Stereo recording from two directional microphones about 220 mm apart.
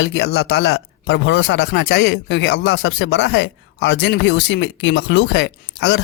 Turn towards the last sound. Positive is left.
turn(degrees=50)  # may be behind; listen again after turning